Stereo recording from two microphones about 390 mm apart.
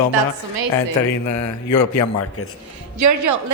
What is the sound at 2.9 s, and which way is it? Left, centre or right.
Speech, right.